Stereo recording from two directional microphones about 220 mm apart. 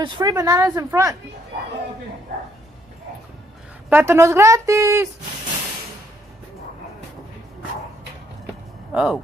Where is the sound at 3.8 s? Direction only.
10° right (ahead or behind).